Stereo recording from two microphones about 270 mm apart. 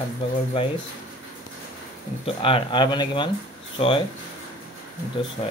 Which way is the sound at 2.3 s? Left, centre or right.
Centre.